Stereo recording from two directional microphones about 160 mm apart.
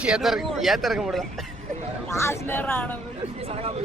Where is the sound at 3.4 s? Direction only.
40° right (ahead or behind).